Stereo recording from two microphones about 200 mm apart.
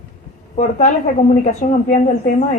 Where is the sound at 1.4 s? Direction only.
35° left (ahead or behind).